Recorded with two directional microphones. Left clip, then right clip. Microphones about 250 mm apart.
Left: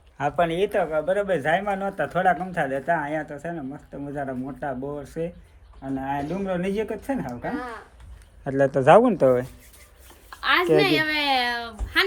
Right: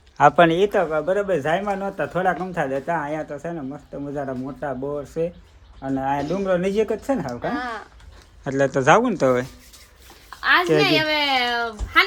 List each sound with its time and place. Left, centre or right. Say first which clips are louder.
0.2 s speech: right 9 dB; right
0.5 s speech: right 3 dB; centre
7.4 s speech: right 5 dB; right
8.4 s speech: even; centre